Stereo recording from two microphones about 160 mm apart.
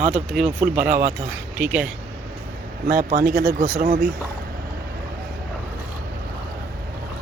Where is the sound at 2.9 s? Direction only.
65° right (ahead or behind).